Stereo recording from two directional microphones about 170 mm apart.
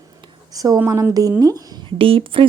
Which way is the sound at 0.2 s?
20° right (ahead or behind).